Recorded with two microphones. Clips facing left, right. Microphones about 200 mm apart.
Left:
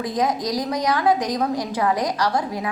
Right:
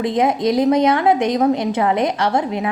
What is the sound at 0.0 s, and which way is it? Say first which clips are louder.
A woman's voice: right 6 dB; 25° right (ahead or behind).